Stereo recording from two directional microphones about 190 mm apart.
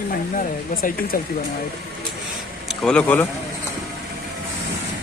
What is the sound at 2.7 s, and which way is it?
Speech, 5° left (ahead or behind).